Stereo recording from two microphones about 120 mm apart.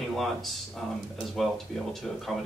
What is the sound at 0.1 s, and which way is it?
Speech, centre (ahead or behind).